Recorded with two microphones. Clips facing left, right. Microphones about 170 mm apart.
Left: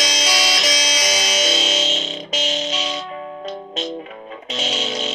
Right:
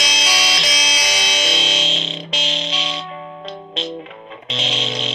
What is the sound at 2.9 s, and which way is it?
Music, 40° left (ahead or behind).